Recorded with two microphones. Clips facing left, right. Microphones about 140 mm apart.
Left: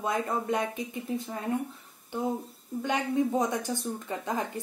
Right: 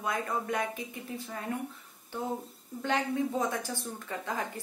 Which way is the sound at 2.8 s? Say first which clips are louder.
Left 2 dB; 15° left (ahead or behind).